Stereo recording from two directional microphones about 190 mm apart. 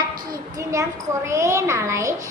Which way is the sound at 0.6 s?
15° right (ahead or behind).